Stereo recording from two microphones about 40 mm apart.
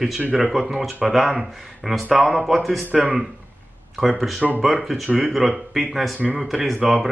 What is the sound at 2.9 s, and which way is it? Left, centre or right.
Speech, right.